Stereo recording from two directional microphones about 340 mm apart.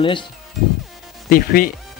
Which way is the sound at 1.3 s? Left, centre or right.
Left.